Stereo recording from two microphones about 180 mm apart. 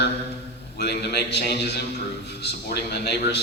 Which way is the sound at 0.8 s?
65° left (ahead or behind).